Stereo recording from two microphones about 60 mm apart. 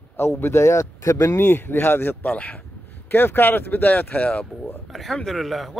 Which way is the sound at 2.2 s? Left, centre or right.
Left.